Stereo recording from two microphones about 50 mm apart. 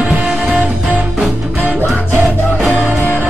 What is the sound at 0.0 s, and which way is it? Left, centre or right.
Music, centre.